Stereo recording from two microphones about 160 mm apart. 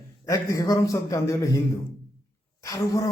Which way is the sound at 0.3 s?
20° left (ahead or behind).